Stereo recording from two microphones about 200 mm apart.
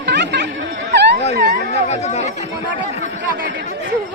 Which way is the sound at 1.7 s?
35° left (ahead or behind).